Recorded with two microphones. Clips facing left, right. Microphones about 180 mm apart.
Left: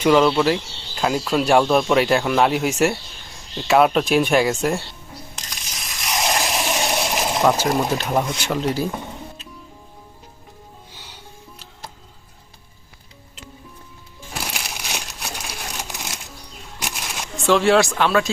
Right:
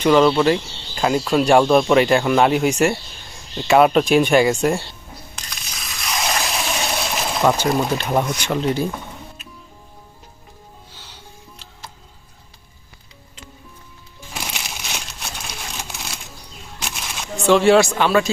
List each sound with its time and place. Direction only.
0.0 s speech: 5° left (ahead or behind)
6.1 s a sound: 15° left (ahead or behind)
7.4 s speech: centre (ahead or behind)
14.3 s music: centre (ahead or behind)
14.9 s crumpling: 15° left (ahead or behind)
16.8 s a sound: 5° left (ahead or behind)